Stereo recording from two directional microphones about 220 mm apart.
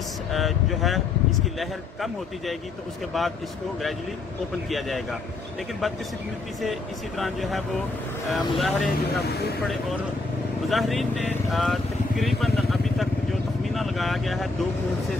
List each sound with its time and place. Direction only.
0.3 s speech: centre (ahead or behind)
4.6 s speech: centre (ahead or behind)
6.6 s speech: centre (ahead or behind)
9.0 s speech: 45° left (ahead or behind)
10.7 s speech: centre (ahead or behind)